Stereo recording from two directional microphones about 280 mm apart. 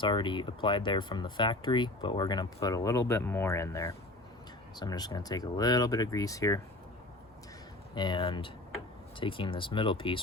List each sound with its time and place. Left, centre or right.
0.0 s speech: centre
7.9 s speech: centre